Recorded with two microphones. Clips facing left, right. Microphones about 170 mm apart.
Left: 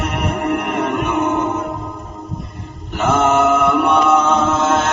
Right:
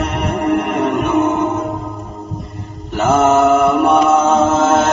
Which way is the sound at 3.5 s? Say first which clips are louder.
Right 3 dB; centre (ahead or behind).